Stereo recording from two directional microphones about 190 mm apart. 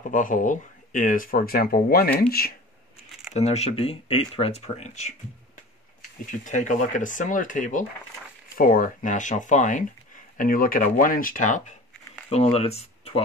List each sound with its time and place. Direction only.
0.0 s speech: 45° left (ahead or behind)
3.3 s speech: 35° left (ahead or behind)
6.4 s speech: 40° left (ahead or behind)
12.3 s speech: 30° left (ahead or behind)